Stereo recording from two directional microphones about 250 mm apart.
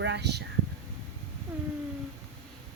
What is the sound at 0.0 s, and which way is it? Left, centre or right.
Speech, right.